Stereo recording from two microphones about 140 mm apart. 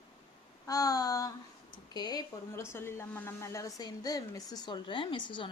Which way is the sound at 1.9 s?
30° left (ahead or behind).